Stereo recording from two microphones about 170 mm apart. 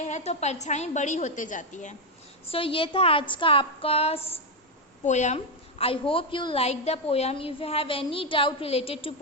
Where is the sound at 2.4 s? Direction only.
35° left (ahead or behind).